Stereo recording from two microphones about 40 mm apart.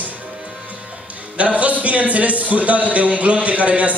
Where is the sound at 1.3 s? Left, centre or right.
Right.